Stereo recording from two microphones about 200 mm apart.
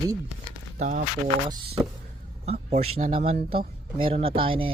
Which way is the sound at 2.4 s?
30° right (ahead or behind).